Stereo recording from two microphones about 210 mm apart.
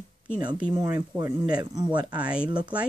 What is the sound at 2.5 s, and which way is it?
Speech, 20° right (ahead or behind).